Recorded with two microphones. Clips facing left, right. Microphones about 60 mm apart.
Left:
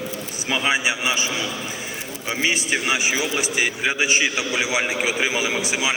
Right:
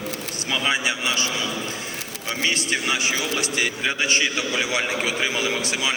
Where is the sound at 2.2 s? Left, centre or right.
Centre.